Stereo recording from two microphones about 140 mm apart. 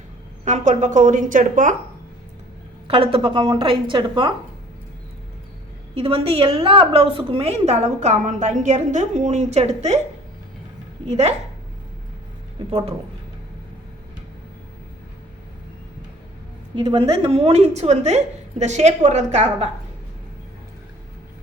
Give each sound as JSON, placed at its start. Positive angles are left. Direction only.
{"t": 0.4, "sound": "a woman's voice", "side_deg": -60}
{"t": 2.8, "sound": "a woman's voice", "side_deg": -40}
{"t": 5.9, "sound": "a woman's voice", "side_deg": -45}
{"t": 11.1, "sound": "a woman's voice", "side_deg": -50}
{"t": 16.7, "sound": "a woman's voice", "side_deg": -35}